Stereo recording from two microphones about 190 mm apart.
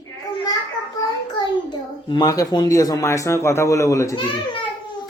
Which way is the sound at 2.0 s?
20° left (ahead or behind).